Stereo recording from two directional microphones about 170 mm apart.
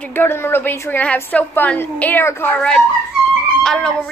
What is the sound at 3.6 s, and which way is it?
Music, 5° left (ahead or behind).